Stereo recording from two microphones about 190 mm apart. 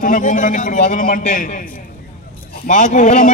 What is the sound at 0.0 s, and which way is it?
A man's voice, 45° left (ahead or behind).